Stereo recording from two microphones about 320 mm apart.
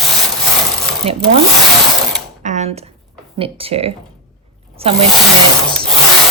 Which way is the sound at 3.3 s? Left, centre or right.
Centre.